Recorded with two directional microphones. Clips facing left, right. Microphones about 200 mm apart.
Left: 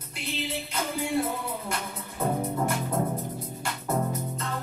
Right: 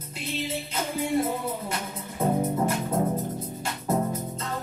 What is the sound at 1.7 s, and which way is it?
Music, 20° right (ahead or behind).